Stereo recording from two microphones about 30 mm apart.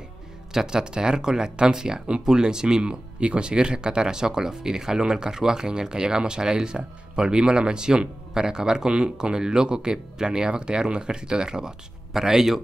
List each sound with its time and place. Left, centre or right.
0.5 s speech: centre